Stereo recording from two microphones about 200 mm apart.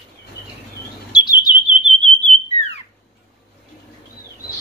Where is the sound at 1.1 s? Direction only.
20° left (ahead or behind).